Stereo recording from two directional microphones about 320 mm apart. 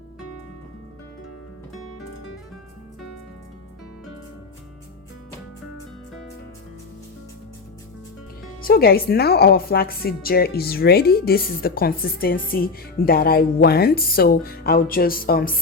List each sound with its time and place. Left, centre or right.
8.6 s a woman's voice: left